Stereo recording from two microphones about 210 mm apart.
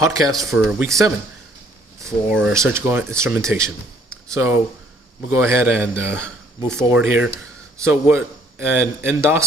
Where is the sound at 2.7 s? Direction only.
10° right (ahead or behind).